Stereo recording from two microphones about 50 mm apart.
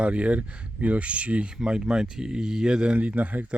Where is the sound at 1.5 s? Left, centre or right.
Centre.